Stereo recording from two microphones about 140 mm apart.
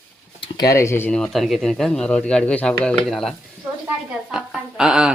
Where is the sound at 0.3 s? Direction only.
40° left (ahead or behind).